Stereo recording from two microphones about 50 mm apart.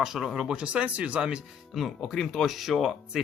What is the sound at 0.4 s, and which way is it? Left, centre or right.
Speech, right.